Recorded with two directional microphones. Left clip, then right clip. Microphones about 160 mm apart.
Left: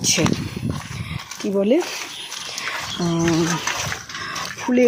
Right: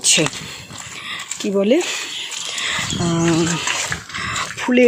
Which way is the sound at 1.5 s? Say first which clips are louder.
Right 2 dB; 10° right (ahead or behind).